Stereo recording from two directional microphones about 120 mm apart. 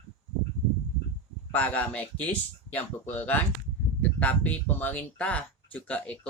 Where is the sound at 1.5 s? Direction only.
10° left (ahead or behind).